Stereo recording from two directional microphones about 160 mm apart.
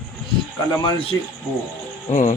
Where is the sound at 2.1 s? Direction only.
50° left (ahead or behind).